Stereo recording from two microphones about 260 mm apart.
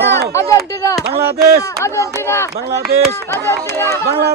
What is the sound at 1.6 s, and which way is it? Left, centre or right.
Speech, centre.